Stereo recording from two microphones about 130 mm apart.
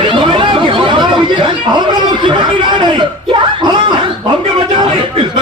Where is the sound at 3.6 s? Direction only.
35° right (ahead or behind).